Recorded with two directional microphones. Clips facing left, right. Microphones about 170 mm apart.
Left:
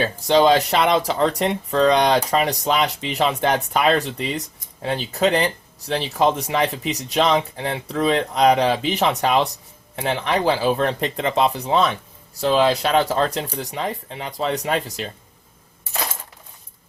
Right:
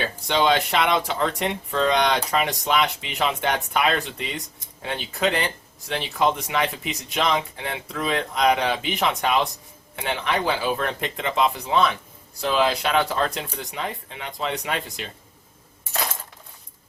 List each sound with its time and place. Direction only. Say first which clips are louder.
0.0 s speech: left 6 dB; 40° left (ahead or behind)